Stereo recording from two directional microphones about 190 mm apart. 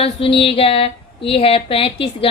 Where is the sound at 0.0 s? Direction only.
30° left (ahead or behind).